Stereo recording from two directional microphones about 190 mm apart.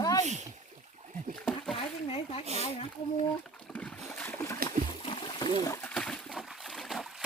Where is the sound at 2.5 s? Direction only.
35° right (ahead or behind).